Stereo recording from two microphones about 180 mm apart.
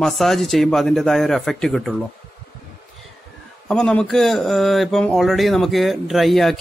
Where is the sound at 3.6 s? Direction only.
5° left (ahead or behind).